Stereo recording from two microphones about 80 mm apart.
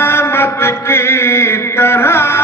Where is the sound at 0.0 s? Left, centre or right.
Left.